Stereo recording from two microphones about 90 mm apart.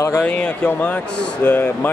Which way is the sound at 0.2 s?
15° left (ahead or behind).